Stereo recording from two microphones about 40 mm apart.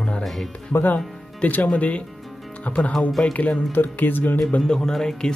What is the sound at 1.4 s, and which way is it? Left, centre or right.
Speech, left.